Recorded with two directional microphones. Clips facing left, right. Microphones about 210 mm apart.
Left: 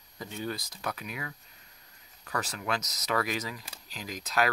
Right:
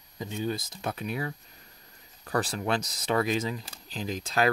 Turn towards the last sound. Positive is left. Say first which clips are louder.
# right 2 dB
turn(degrees=-30)  # may be behind; listen again after turning